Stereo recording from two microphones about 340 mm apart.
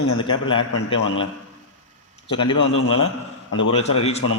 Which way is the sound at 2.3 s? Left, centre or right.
Centre.